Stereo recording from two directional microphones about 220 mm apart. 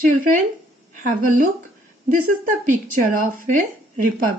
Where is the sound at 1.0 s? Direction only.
35° right (ahead or behind).